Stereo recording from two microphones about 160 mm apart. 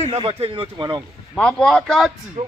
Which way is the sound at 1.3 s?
5° left (ahead or behind).